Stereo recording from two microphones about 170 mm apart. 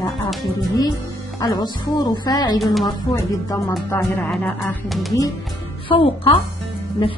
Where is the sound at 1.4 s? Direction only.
20° left (ahead or behind).